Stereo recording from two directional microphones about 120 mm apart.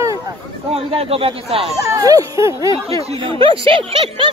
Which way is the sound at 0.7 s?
55° right (ahead or behind).